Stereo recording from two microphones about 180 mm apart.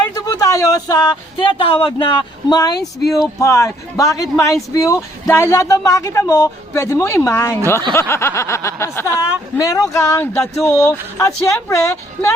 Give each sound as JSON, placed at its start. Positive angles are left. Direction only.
{"t": 0.1, "sound": "speech", "side_deg": 20}